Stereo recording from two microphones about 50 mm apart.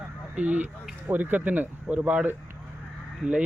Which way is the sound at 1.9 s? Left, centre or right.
Right.